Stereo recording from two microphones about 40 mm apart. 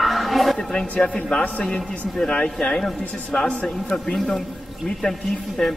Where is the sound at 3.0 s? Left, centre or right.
Left.